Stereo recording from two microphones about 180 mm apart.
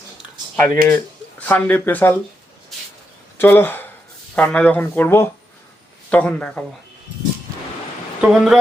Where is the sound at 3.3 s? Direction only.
10° left (ahead or behind).